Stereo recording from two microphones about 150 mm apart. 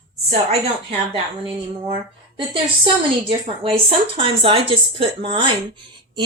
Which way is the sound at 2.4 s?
35° right (ahead or behind).